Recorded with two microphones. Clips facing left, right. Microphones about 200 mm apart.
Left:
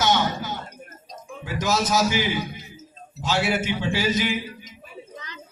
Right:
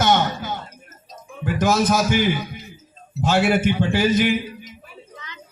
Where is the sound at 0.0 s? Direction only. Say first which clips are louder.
Right 3 dB; 55° right (ahead or behind).